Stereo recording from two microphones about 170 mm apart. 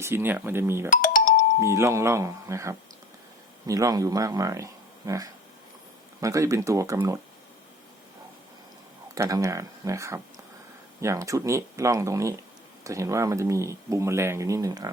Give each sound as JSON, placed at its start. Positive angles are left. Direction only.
{"t": 0.0, "sound": "speech", "side_deg": -15}
{"t": 0.9, "sound": "music", "side_deg": 50}
{"t": 1.6, "sound": "speech", "side_deg": -15}
{"t": 9.1, "sound": "speech", "side_deg": -20}